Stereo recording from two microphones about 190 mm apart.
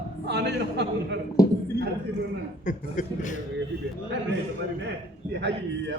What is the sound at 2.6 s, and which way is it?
Speech, 40° left (ahead or behind).